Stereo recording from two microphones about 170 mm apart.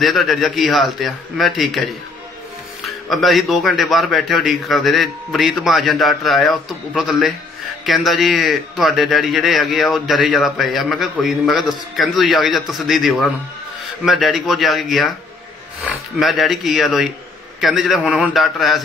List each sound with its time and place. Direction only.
0.0 s a man's voice: centre (ahead or behind)